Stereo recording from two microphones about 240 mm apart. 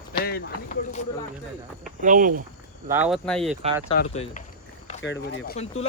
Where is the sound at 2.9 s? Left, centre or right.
Centre.